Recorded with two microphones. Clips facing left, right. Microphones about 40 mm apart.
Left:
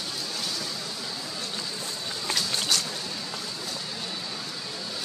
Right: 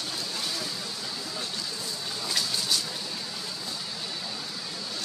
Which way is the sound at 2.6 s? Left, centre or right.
Left.